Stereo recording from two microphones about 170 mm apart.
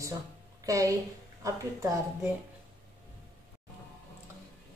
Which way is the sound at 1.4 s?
20° right (ahead or behind).